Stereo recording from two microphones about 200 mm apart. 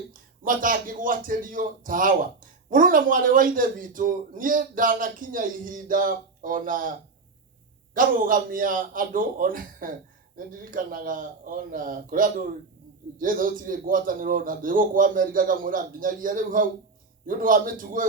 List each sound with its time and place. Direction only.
0.1 s a man's voice: 45° right (ahead or behind)
7.9 s a man's voice: 45° right (ahead or behind)